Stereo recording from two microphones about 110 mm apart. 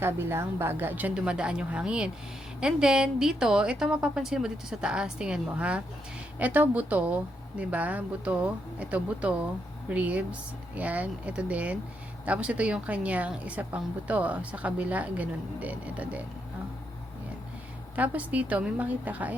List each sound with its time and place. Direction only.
0.0 s a woman's voice: 20° right (ahead or behind)
17.9 s a woman's voice: 15° right (ahead or behind)